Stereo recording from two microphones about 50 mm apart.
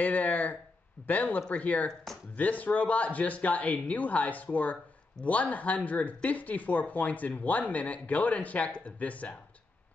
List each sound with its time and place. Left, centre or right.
0.0 s speech: left